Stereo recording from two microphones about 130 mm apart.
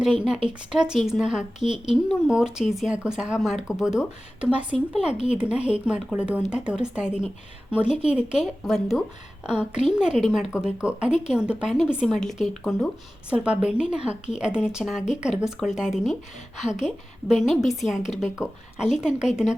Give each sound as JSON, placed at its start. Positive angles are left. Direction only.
{"t": 0.7, "sound": "speech", "side_deg": -5}